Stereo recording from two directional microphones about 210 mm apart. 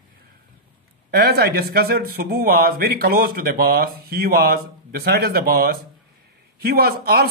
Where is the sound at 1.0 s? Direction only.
50° right (ahead or behind).